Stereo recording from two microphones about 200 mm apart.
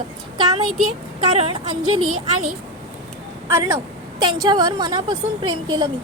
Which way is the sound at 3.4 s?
15° right (ahead or behind).